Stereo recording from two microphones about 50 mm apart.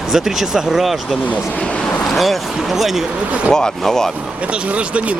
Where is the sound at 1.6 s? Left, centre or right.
Centre.